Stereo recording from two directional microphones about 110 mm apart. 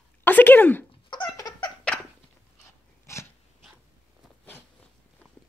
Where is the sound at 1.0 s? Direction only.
40° left (ahead or behind).